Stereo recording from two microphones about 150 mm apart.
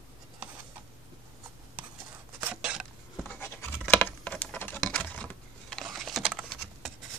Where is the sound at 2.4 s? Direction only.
5° right (ahead or behind).